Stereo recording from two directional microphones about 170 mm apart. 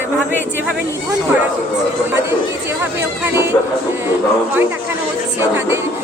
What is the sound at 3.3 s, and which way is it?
Music, 15° right (ahead or behind).